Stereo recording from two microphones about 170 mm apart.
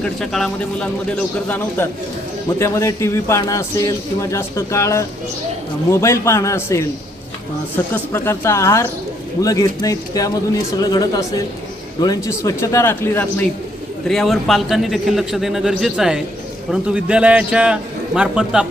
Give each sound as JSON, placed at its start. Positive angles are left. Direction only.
{"t": 0.0, "sound": "speech", "side_deg": 0}
{"t": 7.9, "sound": "a man's voice", "side_deg": 15}
{"t": 14.1, "sound": "a man's voice", "side_deg": 0}